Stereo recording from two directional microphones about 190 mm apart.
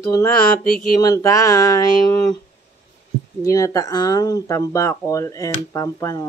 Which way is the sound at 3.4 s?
20° left (ahead or behind).